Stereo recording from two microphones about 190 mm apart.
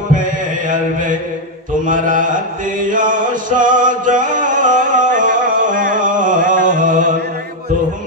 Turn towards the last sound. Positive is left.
turn(degrees=-45)  # may be behind; listen again after turning